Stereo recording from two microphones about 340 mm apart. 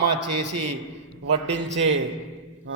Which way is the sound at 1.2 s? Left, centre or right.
Right.